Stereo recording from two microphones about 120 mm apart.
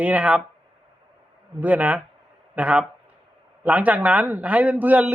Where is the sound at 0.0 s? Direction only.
15° right (ahead or behind).